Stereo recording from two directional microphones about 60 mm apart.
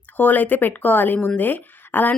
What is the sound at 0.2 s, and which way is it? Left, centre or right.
A woman's voice, left.